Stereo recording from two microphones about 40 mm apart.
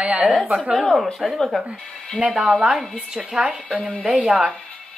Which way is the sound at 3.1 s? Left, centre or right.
Centre.